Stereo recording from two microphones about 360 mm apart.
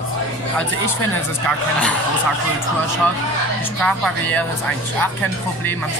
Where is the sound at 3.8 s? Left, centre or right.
Centre.